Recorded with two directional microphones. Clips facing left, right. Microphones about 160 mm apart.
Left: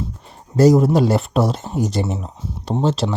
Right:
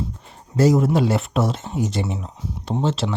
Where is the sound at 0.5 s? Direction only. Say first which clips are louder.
Left 4 dB; 40° left (ahead or behind).